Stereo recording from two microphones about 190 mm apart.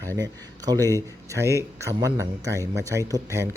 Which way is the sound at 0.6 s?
20° right (ahead or behind).